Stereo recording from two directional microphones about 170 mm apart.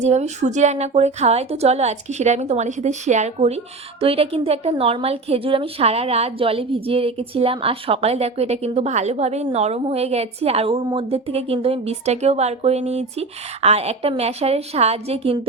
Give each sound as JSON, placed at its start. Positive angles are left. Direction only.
{"t": 0.0, "sound": "a woman's voice", "side_deg": -40}